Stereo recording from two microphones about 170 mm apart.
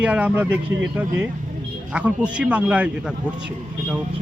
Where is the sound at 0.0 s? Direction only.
10° right (ahead or behind).